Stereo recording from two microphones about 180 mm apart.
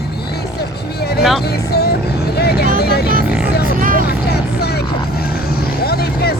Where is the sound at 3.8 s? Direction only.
50° right (ahead or behind).